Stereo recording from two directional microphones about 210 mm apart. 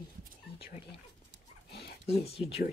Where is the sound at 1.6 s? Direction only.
50° left (ahead or behind).